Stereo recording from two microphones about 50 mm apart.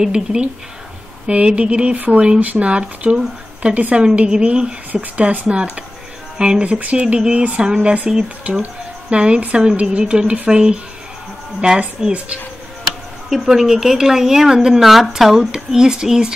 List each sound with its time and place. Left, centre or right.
0.0 s speech: centre
8.5 s speech: right
13.3 s speech: centre